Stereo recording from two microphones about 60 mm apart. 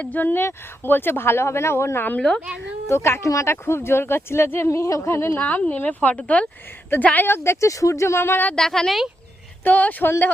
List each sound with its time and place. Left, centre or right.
0.0 s speech: left
2.1 s a woman's voice: centre
2.9 s speech: left
3.2 s speech: left
3.5 s speech: left
4.7 s speech: left
5.4 s a woman's voice: left
7.3 s speech: left
7.7 s speech: left
8.5 s a woman's voice: centre
9.6 s a woman's voice: left